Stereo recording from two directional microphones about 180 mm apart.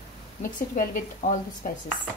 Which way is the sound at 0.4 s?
50° left (ahead or behind).